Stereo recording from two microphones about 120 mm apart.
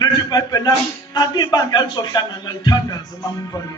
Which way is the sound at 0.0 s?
30° left (ahead or behind).